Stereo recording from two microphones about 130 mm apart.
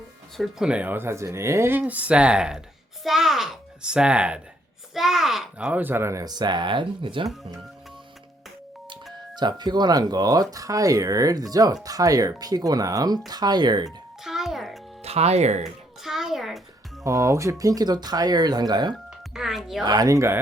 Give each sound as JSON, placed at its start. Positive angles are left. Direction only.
{"t": 0.3, "sound": "a child's voice", "side_deg": -5}
{"t": 9.3, "sound": "speech", "side_deg": -35}
{"t": 14.3, "sound": "music", "side_deg": 0}
{"t": 15.0, "sound": "speech", "side_deg": -55}
{"t": 16.0, "sound": "a child's voice", "side_deg": -5}
{"t": 17.0, "sound": "speech", "side_deg": -25}
{"t": 19.3, "sound": "a child's voice", "side_deg": -5}
{"t": 19.8, "sound": "speech", "side_deg": -30}